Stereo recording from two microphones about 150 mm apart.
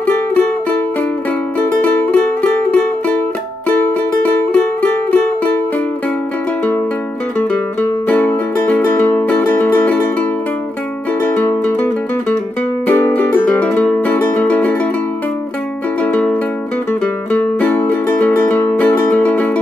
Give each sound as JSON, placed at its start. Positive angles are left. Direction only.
{"t": 0.0, "sound": "music", "side_deg": 10}
{"t": 7.3, "sound": "music", "side_deg": 10}
{"t": 11.2, "sound": "music", "side_deg": 10}
{"t": 16.0, "sound": "music", "side_deg": 10}